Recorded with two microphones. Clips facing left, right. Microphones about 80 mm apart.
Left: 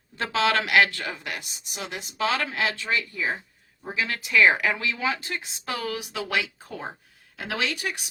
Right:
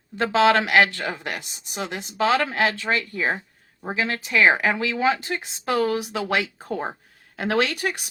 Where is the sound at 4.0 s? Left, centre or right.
Right.